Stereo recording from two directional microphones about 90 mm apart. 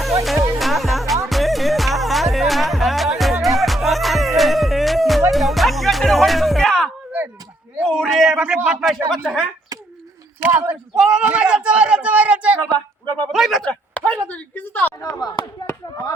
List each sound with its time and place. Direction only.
0.6 s music: centre (ahead or behind)
7.8 s a sound: 5° left (ahead or behind)
8.4 s speech: 15° right (ahead or behind)
9.0 s speech: 5° left (ahead or behind)
10.4 s speech: 20° right (ahead or behind)
10.9 s speech: 10° right (ahead or behind)
12.7 s a sound: 50° right (ahead or behind)
13.3 s speech: centre (ahead or behind)
13.7 s speech: 10° left (ahead or behind)
15.0 s speech: 40° left (ahead or behind)